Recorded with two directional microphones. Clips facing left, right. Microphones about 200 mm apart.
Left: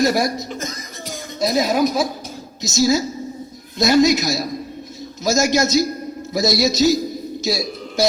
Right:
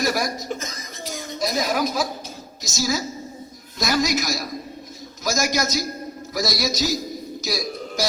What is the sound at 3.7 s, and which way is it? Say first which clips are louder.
A man's voice: left 8 dB; 25° left (ahead or behind).